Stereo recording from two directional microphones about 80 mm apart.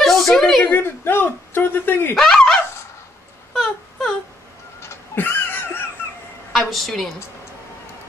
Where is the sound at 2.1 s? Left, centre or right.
Centre.